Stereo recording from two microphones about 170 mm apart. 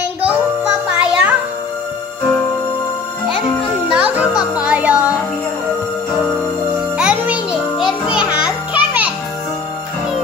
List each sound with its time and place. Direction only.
0.2 s music: 5° right (ahead or behind)
3.9 s music: 10° right (ahead or behind)
7.0 s music: 5° right (ahead or behind)